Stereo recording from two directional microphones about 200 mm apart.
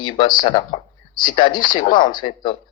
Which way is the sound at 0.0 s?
25° left (ahead or behind).